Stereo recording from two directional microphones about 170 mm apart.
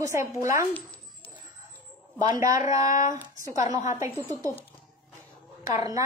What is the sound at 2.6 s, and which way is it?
Speech, 50° left (ahead or behind).